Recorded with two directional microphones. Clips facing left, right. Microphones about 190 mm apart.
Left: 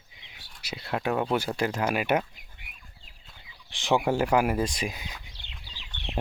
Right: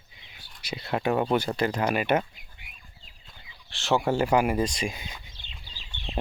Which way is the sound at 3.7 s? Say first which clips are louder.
Even; 15° left (ahead or behind).